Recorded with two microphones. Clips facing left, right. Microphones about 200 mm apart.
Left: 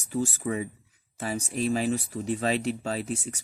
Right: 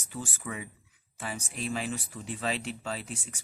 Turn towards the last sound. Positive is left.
turn(degrees=40)  # may be behind; listen again after turning